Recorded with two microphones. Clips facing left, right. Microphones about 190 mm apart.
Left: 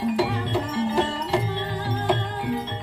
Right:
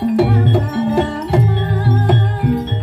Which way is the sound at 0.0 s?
60° right (ahead or behind).